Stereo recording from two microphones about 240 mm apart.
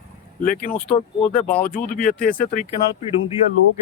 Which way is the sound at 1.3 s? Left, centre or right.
Centre.